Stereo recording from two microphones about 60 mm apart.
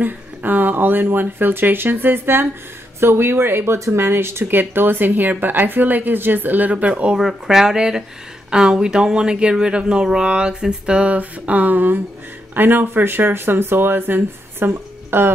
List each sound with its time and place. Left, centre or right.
0.0 s speech: right
7.2 s speech: centre; by 15.3 s right